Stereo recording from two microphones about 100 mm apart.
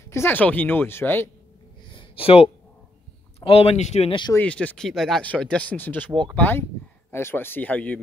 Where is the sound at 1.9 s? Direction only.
65° left (ahead or behind).